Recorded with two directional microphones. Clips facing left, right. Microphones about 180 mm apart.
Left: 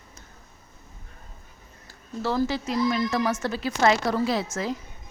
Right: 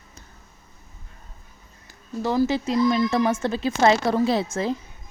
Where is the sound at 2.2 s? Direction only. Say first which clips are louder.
Right 4 dB; 15° right (ahead or behind).